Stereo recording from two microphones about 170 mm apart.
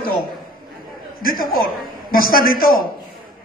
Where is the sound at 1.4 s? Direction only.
60° left (ahead or behind).